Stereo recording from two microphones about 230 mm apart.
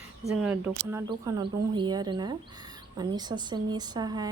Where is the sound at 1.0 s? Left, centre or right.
Centre.